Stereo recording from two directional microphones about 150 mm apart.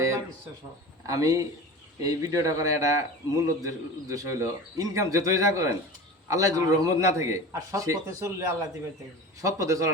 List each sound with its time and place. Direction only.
1.0 s a man's voice: 20° right (ahead or behind)